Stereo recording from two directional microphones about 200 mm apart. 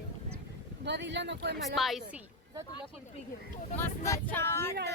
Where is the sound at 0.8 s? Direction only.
60° right (ahead or behind).